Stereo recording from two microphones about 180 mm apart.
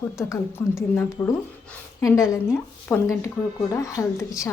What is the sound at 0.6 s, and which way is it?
Speech, 5° left (ahead or behind).